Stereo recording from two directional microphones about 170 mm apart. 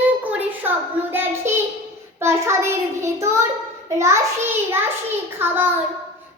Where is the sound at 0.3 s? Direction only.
10° right (ahead or behind).